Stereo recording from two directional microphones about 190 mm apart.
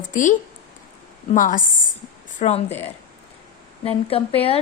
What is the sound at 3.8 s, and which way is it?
Speech, 30° left (ahead or behind).